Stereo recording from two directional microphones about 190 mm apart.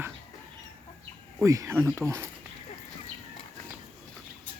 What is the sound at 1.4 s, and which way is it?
Speech, 15° right (ahead or behind).